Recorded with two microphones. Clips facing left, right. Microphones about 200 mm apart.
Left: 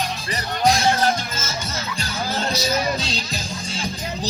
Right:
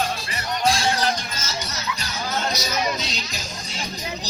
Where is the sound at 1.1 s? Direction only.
30° left (ahead or behind).